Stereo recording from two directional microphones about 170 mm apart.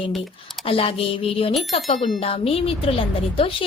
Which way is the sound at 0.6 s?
35° left (ahead or behind).